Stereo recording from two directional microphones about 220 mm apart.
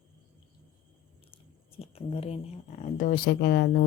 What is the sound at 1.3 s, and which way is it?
Speech, 25° left (ahead or behind).